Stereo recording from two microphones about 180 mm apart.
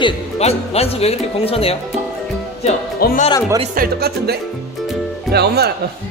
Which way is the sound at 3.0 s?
60° left (ahead or behind).